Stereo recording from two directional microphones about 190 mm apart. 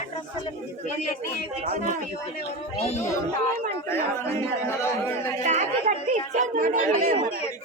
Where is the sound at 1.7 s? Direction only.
40° right (ahead or behind).